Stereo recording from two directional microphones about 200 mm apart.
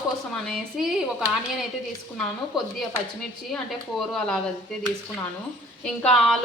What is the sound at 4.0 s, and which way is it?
Speech, centre (ahead or behind).